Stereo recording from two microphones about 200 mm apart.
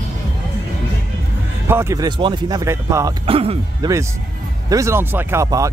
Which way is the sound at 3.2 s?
30° right (ahead or behind).